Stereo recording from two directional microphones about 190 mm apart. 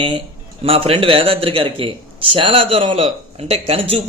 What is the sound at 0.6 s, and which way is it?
A man's voice, 30° right (ahead or behind).